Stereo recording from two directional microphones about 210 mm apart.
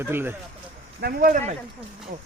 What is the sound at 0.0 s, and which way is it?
Speech, 10° right (ahead or behind).